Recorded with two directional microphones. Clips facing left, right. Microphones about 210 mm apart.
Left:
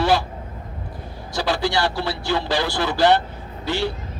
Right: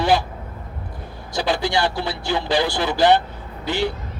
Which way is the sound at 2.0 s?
15° right (ahead or behind).